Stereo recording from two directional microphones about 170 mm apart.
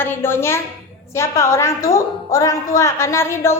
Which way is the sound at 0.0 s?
15° left (ahead or behind).